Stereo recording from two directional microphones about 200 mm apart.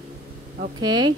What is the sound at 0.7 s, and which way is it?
Speech, 20° right (ahead or behind).